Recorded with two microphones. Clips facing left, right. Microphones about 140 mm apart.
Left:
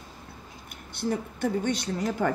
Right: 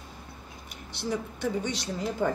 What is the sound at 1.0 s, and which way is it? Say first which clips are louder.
Laughter: left 2 dB; 55° left (ahead or behind).